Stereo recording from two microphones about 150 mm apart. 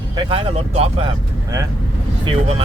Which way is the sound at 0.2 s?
35° right (ahead or behind).